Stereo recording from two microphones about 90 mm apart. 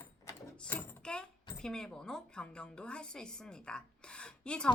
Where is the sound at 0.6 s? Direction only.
20° left (ahead or behind).